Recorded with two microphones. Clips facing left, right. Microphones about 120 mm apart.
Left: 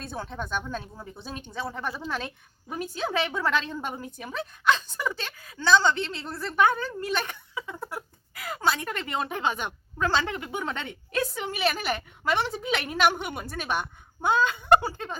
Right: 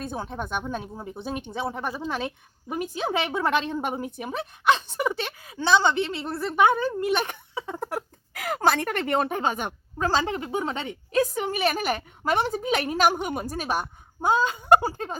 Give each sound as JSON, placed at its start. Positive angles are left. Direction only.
{"t": 0.0, "sound": "a woman's voice", "side_deg": -15}
{"t": 7.5, "sound": "a sound", "side_deg": -35}
{"t": 8.3, "sound": "a woman's voice", "side_deg": -75}